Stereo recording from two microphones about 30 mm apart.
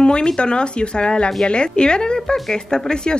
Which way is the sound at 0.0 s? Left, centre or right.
Left.